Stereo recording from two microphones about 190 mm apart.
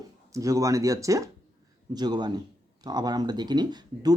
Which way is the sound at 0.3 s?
15° right (ahead or behind).